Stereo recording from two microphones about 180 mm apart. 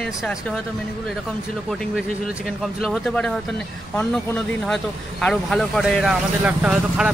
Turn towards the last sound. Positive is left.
turn(degrees=-5)  # may be behind; listen again after turning